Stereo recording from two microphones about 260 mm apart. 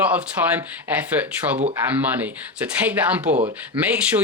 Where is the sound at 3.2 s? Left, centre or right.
Right.